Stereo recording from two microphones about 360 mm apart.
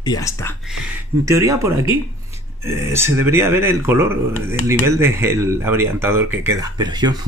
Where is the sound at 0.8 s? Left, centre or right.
Centre.